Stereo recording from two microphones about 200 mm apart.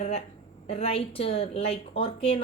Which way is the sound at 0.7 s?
30° left (ahead or behind).